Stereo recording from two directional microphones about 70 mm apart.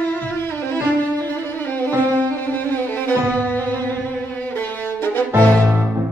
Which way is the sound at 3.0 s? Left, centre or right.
Left.